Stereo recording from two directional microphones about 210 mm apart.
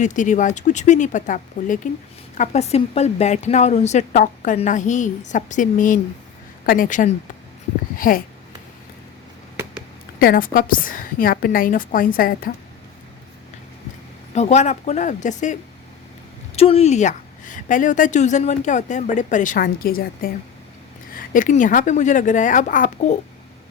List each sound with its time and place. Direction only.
0.0 s a woman's voice: 35° left (ahead or behind)
7.9 s a sound: 40° left (ahead or behind)
10.2 s a woman's voice: 45° left (ahead or behind)
14.3 s a woman's voice: 30° left (ahead or behind)
16.6 s a woman's voice: 30° left (ahead or behind)